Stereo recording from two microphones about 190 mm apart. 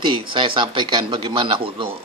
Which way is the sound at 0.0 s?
25° right (ahead or behind).